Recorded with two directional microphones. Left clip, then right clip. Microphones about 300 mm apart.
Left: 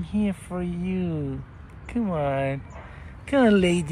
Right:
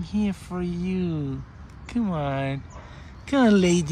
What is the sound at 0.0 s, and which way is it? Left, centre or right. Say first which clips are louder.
Speech: even; centre.